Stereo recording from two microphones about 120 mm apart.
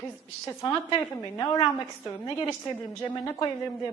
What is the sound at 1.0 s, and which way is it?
A woman's voice, 30° left (ahead or behind).